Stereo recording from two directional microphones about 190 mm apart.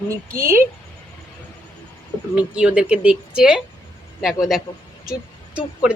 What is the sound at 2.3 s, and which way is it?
Speech, 5° right (ahead or behind).